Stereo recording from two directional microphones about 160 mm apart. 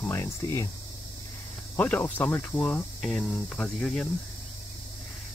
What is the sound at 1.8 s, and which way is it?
Speech, 10° left (ahead or behind).